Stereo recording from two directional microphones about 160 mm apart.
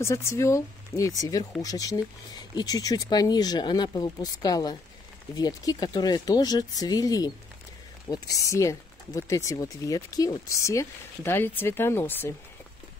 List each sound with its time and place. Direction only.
0.0 s speech: 15° left (ahead or behind)